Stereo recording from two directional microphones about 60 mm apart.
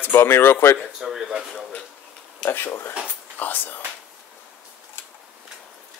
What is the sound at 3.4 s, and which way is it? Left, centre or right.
Whispering, left.